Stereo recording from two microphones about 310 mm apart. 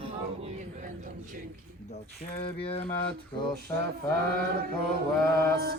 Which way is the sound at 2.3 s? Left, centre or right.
Centre.